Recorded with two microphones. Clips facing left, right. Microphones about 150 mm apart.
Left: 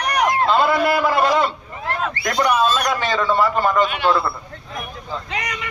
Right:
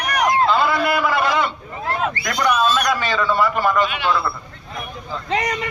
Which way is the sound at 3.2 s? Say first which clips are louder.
Left 2 dB; 20° left (ahead or behind).